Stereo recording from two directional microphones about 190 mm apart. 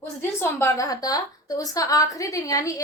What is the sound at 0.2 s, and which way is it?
A woman's voice, 15° left (ahead or behind).